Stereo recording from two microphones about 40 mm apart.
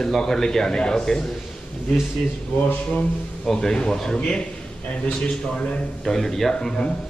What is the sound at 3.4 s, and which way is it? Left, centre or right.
A man's voice, centre.